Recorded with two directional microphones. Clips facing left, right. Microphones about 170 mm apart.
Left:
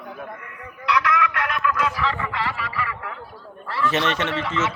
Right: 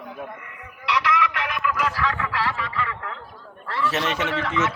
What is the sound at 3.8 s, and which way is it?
Speech, 5° right (ahead or behind).